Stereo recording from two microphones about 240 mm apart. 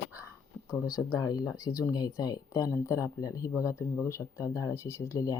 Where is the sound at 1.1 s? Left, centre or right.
Centre.